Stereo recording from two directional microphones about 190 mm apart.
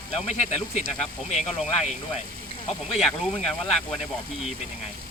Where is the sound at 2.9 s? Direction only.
Centre (ahead or behind).